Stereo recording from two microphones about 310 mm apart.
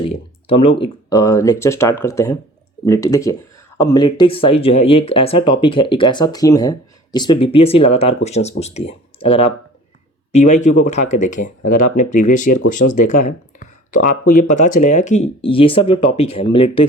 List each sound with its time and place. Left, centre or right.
0.0 s speech: centre
11.6 s speech: left
11.9 s speech: left